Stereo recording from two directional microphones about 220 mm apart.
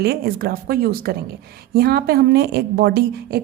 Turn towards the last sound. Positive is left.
turn(degrees=-45)  # may be behind; listen again after turning